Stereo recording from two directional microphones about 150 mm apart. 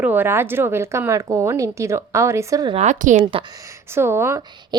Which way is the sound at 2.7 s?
50° right (ahead or behind).